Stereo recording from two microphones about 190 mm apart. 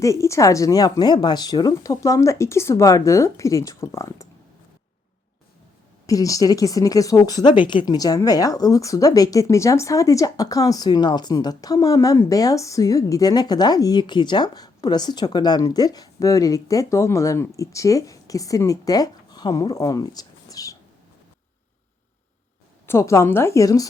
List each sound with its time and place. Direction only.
0.0 s speech: 15° left (ahead or behind)
6.1 s a woman's voice: 15° left (ahead or behind)
22.9 s speech: 15° left (ahead or behind)